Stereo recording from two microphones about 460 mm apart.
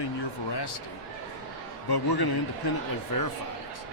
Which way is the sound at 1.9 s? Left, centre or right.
Left.